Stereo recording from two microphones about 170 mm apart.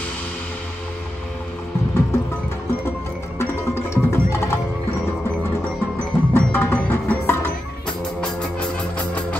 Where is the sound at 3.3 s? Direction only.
15° left (ahead or behind).